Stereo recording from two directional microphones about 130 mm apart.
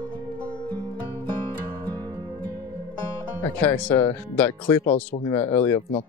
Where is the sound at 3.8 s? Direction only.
10° left (ahead or behind).